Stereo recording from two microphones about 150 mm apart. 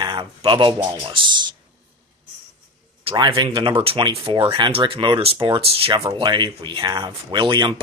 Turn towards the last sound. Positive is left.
turn(degrees=-30)  # may be behind; listen again after turning